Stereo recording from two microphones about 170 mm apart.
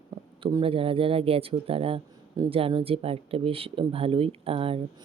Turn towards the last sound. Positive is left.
turn(degrees=-35)  # may be behind; listen again after turning